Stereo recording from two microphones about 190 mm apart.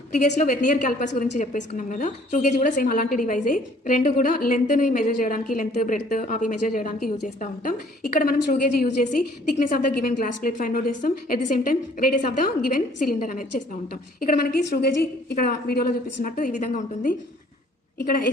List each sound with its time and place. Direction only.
0.2 s a woman's voice: 40° left (ahead or behind)